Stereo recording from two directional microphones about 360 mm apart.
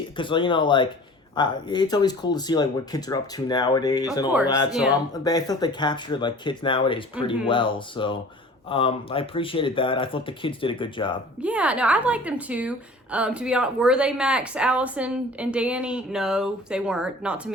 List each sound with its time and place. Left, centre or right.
0.2 s speech: centre
11.3 s a woman's voice: centre